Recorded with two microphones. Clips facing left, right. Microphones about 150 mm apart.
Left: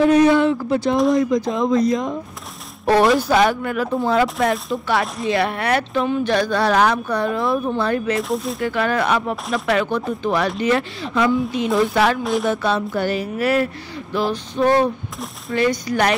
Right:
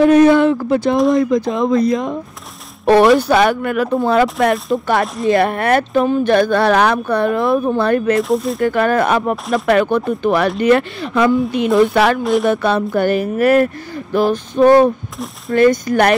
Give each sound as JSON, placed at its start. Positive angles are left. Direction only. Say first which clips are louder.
{"t": 0.0, "sound": "speech", "louder": "right 4 dB", "side_deg": -55}
{"t": 5.3, "sound": "speech", "louder": "right 6 dB", "side_deg": -50}
{"t": 6.3, "sound": "speech", "louder": "right 5 dB", "side_deg": -55}
{"t": 8.2, "sound": "speech", "louder": "right 6 dB", "side_deg": 0}
{"t": 8.5, "sound": "speech", "louder": "right 5 dB", "side_deg": -50}
{"t": 12.2, "sound": "speech", "louder": "right 5 dB", "side_deg": 0}
{"t": 12.4, "sound": "speech", "louder": "right 5 dB", "side_deg": -55}